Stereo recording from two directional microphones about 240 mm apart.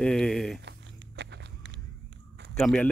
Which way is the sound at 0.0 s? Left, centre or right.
Centre.